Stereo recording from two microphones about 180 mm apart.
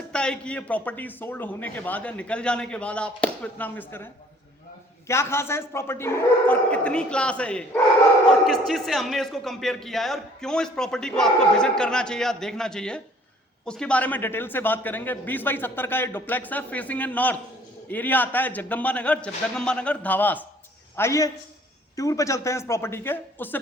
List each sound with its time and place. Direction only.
0.1 s a man's voice: 5° left (ahead or behind)